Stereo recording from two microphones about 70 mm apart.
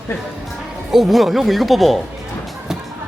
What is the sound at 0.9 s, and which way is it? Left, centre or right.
Speech, centre.